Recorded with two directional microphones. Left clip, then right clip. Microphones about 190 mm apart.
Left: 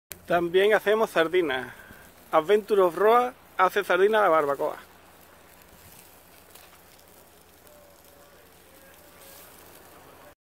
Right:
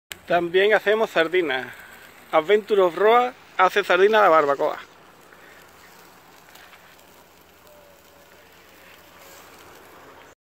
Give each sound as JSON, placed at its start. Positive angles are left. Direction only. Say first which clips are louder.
{"t": 0.3, "sound": "speech", "louder": "right 3 dB", "side_deg": 0}